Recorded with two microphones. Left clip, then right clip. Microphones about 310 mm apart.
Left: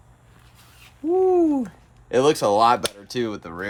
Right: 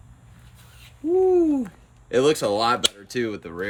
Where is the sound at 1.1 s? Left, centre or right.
Centre.